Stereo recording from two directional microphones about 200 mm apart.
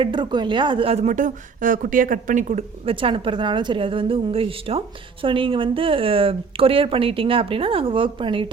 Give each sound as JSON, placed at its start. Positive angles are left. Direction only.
{"t": 0.0, "sound": "speech", "side_deg": -25}